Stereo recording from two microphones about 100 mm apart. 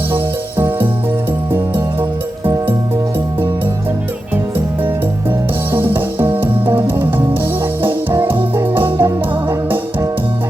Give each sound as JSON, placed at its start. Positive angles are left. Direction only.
{"t": 5.7, "sound": "music", "side_deg": -20}